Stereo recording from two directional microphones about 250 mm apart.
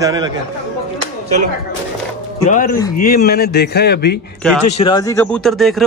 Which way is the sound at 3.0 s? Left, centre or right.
Left.